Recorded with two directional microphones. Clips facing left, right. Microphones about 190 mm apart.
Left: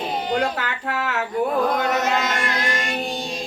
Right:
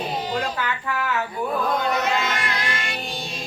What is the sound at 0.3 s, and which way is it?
Music, 55° left (ahead or behind).